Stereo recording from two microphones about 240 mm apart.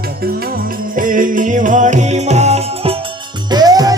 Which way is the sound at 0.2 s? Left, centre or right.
Right.